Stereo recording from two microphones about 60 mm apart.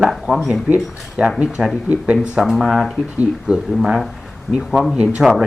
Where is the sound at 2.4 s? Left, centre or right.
Centre.